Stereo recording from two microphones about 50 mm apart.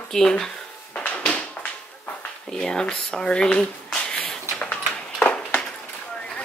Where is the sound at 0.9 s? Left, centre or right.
Left.